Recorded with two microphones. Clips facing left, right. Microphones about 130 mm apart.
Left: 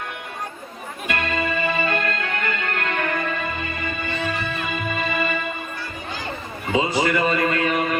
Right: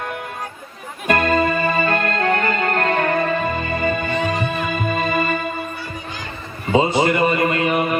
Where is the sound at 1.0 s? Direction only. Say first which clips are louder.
Right 8 dB; 45° right (ahead or behind).